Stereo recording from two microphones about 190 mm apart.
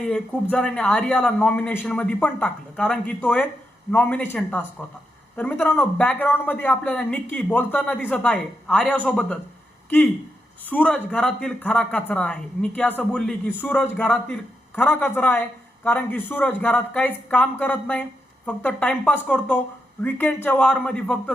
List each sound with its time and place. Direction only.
0.5 s speech: 5° left (ahead or behind)
10.7 s speech: 10° left (ahead or behind)